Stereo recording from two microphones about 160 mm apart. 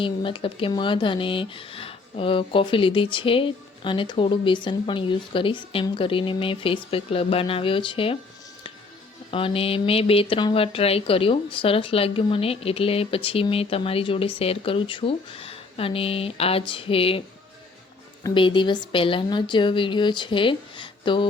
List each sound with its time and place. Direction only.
0.0 s speech: 30° left (ahead or behind)
9.3 s speech: 35° left (ahead or behind)